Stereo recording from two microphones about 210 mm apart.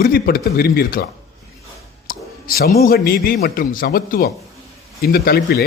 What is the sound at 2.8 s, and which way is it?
Speech, 45° left (ahead or behind).